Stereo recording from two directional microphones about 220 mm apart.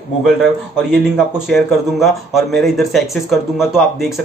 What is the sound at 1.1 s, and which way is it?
Speech, centre (ahead or behind).